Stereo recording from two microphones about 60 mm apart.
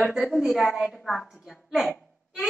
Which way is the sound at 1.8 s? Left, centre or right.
Centre.